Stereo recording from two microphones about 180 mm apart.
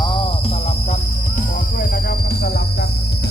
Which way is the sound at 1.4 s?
50° left (ahead or behind).